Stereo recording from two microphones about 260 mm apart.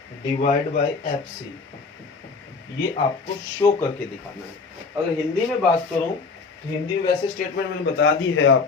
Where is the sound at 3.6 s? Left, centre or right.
Centre.